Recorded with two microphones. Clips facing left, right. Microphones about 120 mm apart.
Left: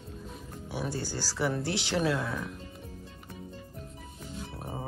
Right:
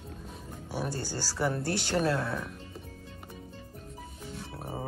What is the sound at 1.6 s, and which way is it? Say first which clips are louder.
Speech: even; 45° right (ahead or behind).